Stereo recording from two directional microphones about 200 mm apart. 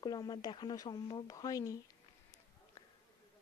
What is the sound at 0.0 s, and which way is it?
Speech, 20° left (ahead or behind).